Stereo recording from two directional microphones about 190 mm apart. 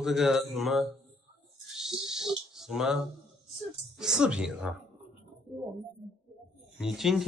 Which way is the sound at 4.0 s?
5° right (ahead or behind).